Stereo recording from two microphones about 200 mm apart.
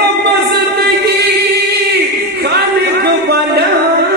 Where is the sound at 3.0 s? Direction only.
55° right (ahead or behind).